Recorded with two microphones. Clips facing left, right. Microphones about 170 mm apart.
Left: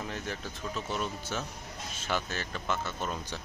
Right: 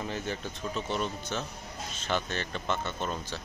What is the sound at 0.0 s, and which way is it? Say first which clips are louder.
Speech: right 3 dB; centre (ahead or behind).